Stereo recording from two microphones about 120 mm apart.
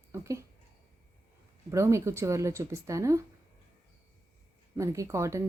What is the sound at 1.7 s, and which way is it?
Speech, 25° right (ahead or behind).